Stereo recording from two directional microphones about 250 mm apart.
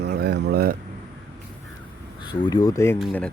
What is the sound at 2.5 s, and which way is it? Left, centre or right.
Speech, centre.